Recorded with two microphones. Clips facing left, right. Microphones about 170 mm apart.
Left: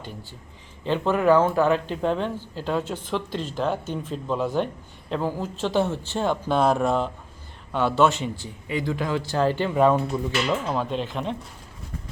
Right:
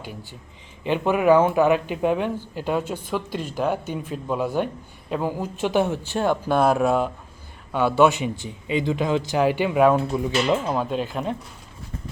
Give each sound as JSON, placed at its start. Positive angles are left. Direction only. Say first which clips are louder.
{"t": 0.0, "sound": "speech", "louder": "right 2 dB", "side_deg": -15}
{"t": 10.3, "sound": "speech", "louder": "right 5 dB", "side_deg": -20}
{"t": 10.7, "sound": "speech", "louder": "right 2 dB", "side_deg": -5}